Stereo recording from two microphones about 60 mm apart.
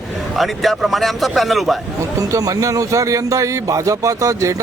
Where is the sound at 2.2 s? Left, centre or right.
Right.